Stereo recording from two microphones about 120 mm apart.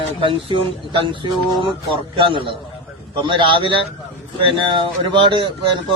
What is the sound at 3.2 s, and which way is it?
A man's voice, 45° right (ahead or behind).